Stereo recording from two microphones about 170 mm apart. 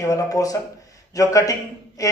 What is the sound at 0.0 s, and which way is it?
Speech, 20° left (ahead or behind).